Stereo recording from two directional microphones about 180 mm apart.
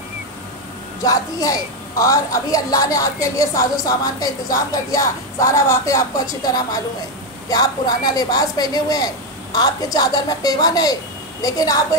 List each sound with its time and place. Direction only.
1.0 s a woman's voice: 20° left (ahead or behind)